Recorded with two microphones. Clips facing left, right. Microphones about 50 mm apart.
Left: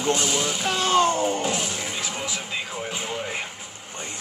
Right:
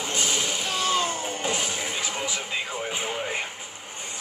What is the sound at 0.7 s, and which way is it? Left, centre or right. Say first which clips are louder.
Music: left 6 dB; left.